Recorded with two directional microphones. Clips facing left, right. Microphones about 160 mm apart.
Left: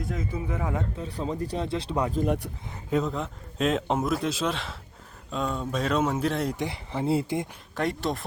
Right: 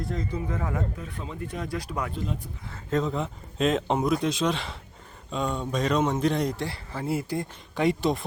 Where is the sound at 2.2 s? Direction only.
75° left (ahead or behind).